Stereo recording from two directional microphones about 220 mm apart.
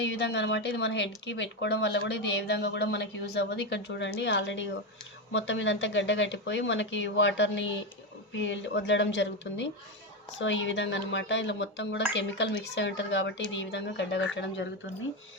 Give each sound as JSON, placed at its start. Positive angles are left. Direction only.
{"t": 0.1, "sound": "speech", "side_deg": 50}